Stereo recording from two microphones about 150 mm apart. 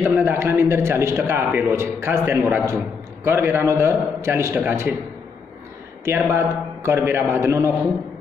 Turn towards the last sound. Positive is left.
turn(degrees=-20)  # may be behind; listen again after turning